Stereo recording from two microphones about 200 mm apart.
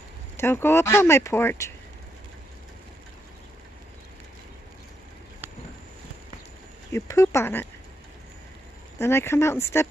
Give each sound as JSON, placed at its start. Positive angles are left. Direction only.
{"t": 0.4, "sound": "speech", "side_deg": 10}
{"t": 6.9, "sound": "speech", "side_deg": 15}
{"t": 8.9, "sound": "speech", "side_deg": 10}